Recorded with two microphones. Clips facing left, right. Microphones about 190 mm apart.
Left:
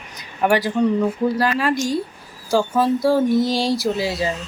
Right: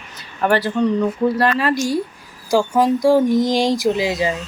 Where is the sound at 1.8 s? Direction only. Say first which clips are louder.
Right 2 dB; 10° right (ahead or behind).